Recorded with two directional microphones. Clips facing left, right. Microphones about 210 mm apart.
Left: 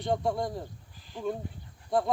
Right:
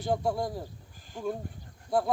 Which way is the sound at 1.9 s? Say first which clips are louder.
Even; centre (ahead or behind).